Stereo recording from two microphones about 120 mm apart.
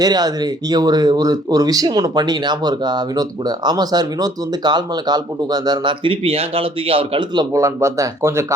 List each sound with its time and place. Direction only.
0.0 s speech: 30° right (ahead or behind)
7.5 s speech: 25° right (ahead or behind)